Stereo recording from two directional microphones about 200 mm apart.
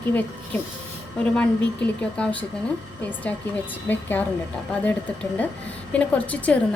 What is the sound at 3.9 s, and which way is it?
A woman's voice, 10° left (ahead or behind).